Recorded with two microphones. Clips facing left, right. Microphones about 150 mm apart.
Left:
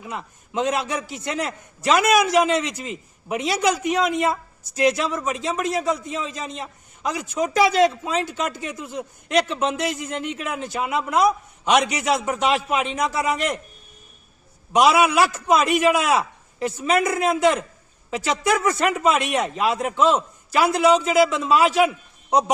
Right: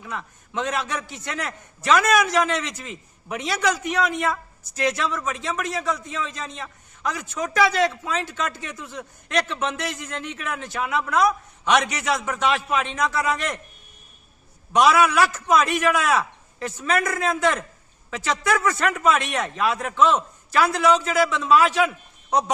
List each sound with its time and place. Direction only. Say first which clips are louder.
0.0 s a man's voice: left 1 dB; 20° left (ahead or behind)
14.7 s a man's voice: left 1 dB; 15° left (ahead or behind)